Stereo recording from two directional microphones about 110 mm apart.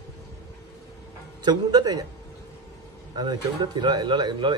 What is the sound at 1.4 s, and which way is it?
Speech, 40° right (ahead or behind).